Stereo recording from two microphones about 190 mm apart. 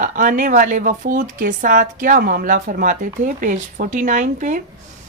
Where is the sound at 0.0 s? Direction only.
45° right (ahead or behind).